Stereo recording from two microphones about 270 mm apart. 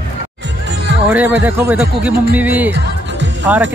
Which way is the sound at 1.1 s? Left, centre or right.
Centre.